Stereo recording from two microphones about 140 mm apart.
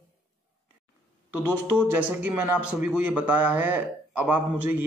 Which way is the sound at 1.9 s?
15° right (ahead or behind).